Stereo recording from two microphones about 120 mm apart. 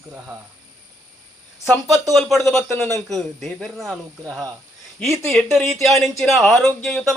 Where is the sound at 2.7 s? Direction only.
20° left (ahead or behind).